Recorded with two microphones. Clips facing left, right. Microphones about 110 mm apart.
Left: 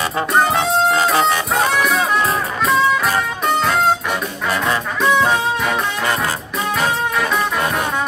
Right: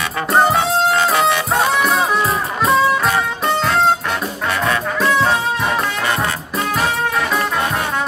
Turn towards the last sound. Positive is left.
turn(degrees=0)  # may be behind; listen again after turning